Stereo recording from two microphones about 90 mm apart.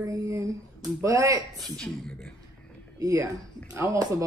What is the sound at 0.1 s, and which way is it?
Speech, 35° right (ahead or behind).